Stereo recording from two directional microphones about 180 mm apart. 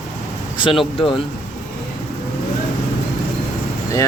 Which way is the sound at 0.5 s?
30° left (ahead or behind).